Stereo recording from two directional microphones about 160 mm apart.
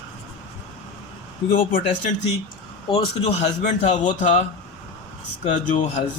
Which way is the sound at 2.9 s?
40° left (ahead or behind).